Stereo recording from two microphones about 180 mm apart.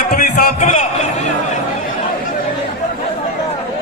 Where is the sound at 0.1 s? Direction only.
50° left (ahead or behind).